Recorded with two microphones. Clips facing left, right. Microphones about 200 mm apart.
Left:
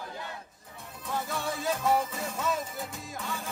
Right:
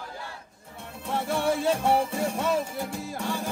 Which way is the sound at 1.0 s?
30° right (ahead or behind).